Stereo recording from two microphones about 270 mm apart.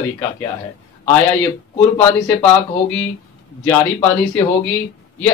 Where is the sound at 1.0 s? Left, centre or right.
Centre.